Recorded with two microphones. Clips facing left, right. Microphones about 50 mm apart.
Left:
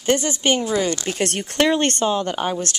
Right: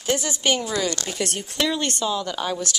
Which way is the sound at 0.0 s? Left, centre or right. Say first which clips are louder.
Left 4 dB; left.